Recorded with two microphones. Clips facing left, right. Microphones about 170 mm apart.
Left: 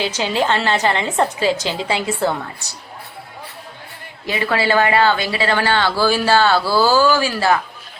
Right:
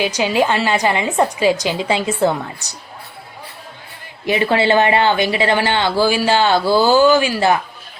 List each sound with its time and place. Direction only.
0.0 s a woman's voice: 15° right (ahead or behind)
4.3 s speech: 25° right (ahead or behind)